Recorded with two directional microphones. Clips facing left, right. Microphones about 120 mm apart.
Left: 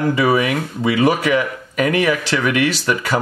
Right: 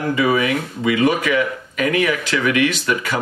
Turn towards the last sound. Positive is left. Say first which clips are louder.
# left 2 dB
turn(degrees=35)  # may be behind; listen again after turning